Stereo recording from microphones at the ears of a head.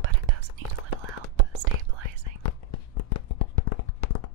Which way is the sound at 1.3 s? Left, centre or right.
Right.